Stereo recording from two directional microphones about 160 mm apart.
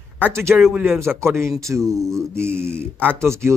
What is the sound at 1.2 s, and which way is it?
Speech, 15° right (ahead or behind).